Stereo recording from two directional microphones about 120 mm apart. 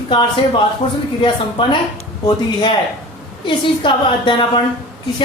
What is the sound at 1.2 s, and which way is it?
A woman's voice, 45° left (ahead or behind).